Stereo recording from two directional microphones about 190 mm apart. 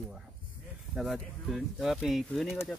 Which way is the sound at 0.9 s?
Centre (ahead or behind).